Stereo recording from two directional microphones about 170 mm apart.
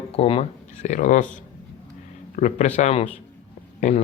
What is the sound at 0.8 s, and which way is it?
Speech, 45° left (ahead or behind).